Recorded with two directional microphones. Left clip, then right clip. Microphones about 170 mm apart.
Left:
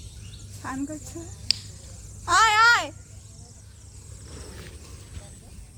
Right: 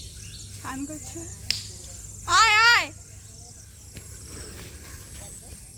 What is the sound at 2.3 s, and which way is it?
Babbling, 85° left.